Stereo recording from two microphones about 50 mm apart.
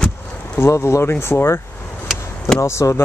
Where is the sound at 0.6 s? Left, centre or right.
Left.